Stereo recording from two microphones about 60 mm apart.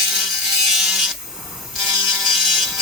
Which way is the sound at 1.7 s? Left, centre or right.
Centre.